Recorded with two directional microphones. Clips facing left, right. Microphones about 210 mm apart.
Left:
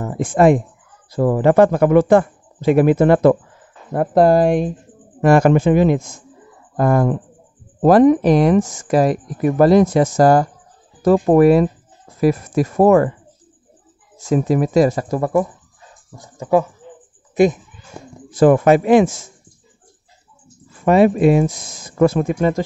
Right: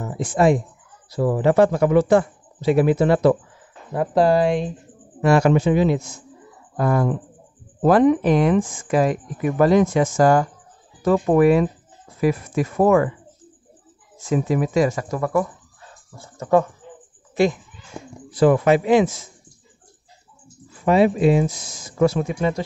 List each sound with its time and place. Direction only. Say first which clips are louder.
0.0 s speech: left 4 dB; 55° left (ahead or behind)
14.2 s speech: left 4 dB; 40° left (ahead or behind)
16.2 s speech: left 1 dB; 10° left (ahead or behind)
18.3 s speech: left 4 dB; 50° left (ahead or behind)
20.8 s speech: left 4 dB; 50° left (ahead or behind)